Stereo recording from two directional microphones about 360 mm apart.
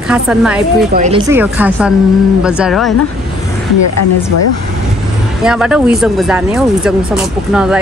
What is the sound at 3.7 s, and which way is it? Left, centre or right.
Speech, left.